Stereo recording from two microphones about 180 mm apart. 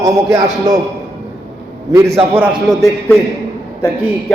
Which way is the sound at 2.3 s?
15° right (ahead or behind).